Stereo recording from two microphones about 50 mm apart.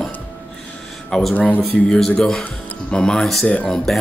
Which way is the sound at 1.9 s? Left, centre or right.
Centre.